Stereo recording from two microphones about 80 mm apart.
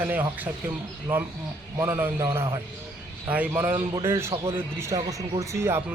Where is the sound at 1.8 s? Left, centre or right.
Right.